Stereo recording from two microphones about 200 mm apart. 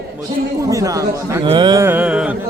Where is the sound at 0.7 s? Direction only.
15° right (ahead or behind).